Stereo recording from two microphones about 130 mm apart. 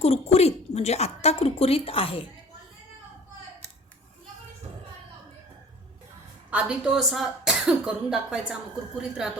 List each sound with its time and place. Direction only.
0.0 s speech: 55° left (ahead or behind)
6.5 s a woman's voice: 10° right (ahead or behind)